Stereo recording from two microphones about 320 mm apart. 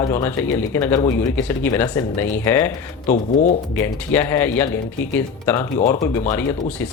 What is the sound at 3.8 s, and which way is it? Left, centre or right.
Speech, centre.